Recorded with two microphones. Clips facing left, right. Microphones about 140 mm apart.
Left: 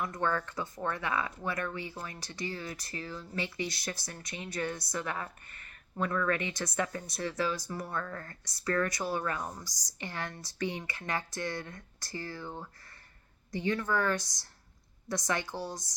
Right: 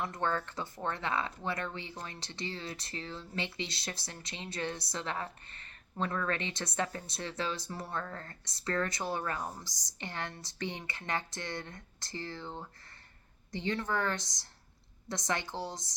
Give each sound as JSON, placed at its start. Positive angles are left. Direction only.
{"t": 0.0, "sound": "speech", "side_deg": -25}
{"t": 13.7, "sound": "speech", "side_deg": -20}